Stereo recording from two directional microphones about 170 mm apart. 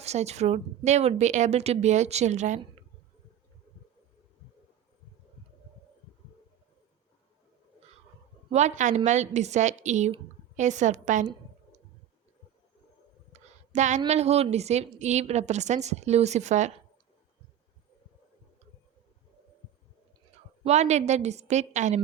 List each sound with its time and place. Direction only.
0.0 s a woman's voice: 40° right (ahead or behind)
8.5 s a woman's voice: 45° right (ahead or behind)
13.3 s a sound: 45° right (ahead or behind)
14.1 s a woman's voice: 40° right (ahead or behind)
20.7 s a woman's voice: 40° right (ahead or behind)